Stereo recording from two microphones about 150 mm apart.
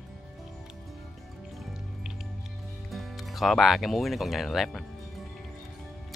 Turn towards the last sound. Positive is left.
turn(degrees=0)  # may be behind; listen again after turning